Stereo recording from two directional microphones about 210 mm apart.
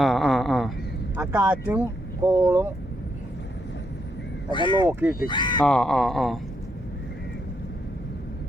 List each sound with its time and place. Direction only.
0.0 s a sound: centre (ahead or behind)
1.1 s speech: 10° right (ahead or behind)
4.5 s speech: 20° left (ahead or behind)
4.9 s speech: 10° right (ahead or behind)
5.3 s speech: 20° left (ahead or behind)
5.6 s speech: 5° left (ahead or behind)